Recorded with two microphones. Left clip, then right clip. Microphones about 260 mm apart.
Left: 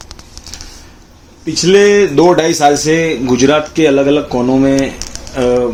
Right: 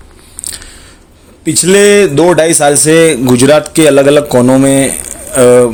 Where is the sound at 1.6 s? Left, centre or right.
Right.